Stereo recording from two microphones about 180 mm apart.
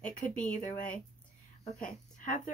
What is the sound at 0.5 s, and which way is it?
Speech, 45° left (ahead or behind).